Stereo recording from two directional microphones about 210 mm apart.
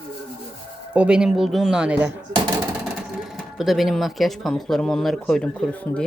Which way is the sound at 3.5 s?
Centre (ahead or behind).